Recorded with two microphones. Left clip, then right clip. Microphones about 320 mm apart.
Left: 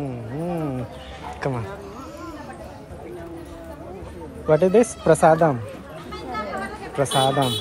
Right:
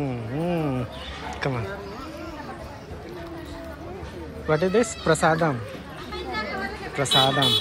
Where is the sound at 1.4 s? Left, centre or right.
Centre.